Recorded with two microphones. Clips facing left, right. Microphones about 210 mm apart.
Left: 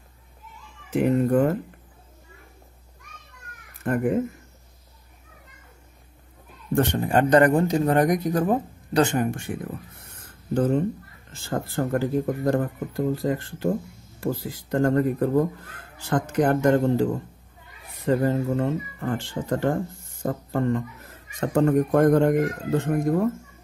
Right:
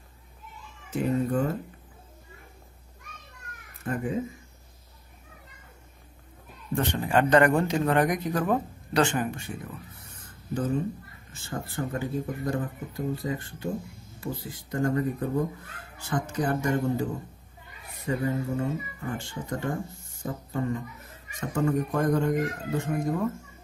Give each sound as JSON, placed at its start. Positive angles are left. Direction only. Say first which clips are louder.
{"t": 0.9, "sound": "speech", "louder": "left 6 dB", "side_deg": 65}
{"t": 3.8, "sound": "speech", "louder": "left 7 dB", "side_deg": 60}
{"t": 6.7, "sound": "speech", "louder": "left 4 dB", "side_deg": 45}
{"t": 10.5, "sound": "speech", "louder": "left 6 dB", "side_deg": 70}
{"t": 11.4, "sound": "speech", "louder": "left 6 dB", "side_deg": 80}